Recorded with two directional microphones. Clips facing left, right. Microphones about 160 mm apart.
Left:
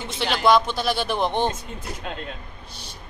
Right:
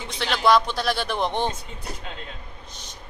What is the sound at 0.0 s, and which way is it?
Speech, centre (ahead or behind).